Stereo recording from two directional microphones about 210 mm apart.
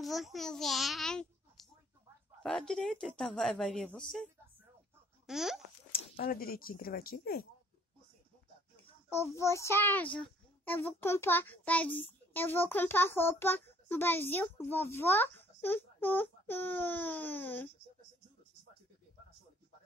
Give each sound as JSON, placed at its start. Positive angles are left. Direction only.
{"t": 0.0, "sound": "a child's voice", "side_deg": 0}
{"t": 6.1, "sound": "speech", "side_deg": 45}
{"t": 9.1, "sound": "a child's voice", "side_deg": 15}